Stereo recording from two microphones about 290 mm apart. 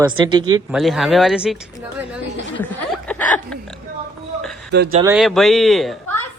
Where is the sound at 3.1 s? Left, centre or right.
Centre.